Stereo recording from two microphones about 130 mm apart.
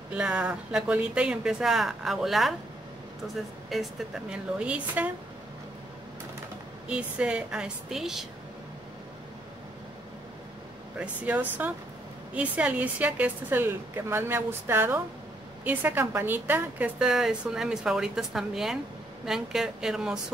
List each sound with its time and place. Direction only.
0.1 s a woman's voice: 10° right (ahead or behind)
6.9 s a woman's voice: 10° right (ahead or behind)
11.0 s a woman's voice: 10° right (ahead or behind)